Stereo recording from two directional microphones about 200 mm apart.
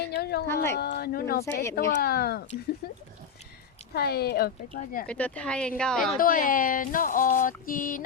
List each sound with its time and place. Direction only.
0.0 s speech: 50° left (ahead or behind)
0.4 s speech: 10° left (ahead or behind)
0.8 s speech: 50° left (ahead or behind)
3.9 s speech: 50° left (ahead or behind)
5.0 s speech: 5° left (ahead or behind)
6.1 s speech: 45° left (ahead or behind)